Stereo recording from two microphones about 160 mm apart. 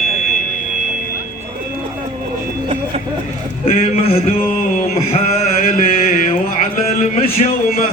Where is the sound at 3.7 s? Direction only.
40° left (ahead or behind).